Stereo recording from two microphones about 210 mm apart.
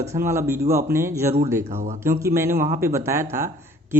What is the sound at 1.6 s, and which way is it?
Speech, 35° right (ahead or behind).